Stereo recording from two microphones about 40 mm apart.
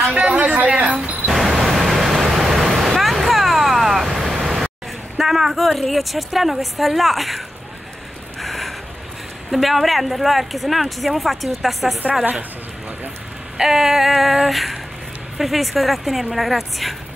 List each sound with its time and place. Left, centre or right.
0.4 s speech: right
1.3 s vehicle: centre
5.1 s speech: centre
8.4 s a sound: centre
9.5 s speech: centre
13.6 s female singing: centre
15.3 s speech: centre